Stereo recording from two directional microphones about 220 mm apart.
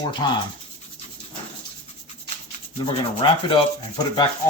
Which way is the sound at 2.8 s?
20° left (ahead or behind).